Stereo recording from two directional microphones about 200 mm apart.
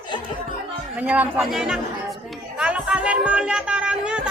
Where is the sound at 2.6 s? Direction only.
5° right (ahead or behind).